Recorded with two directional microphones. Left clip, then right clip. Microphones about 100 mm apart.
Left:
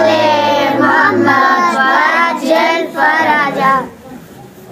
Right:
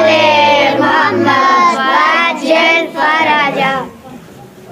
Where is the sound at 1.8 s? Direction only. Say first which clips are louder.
Even; 25° left (ahead or behind).